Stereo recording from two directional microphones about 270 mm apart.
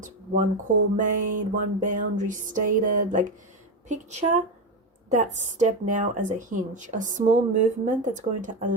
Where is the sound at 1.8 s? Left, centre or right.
Right.